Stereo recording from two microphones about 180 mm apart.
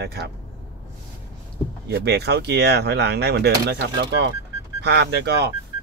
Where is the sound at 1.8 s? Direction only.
65° right (ahead or behind).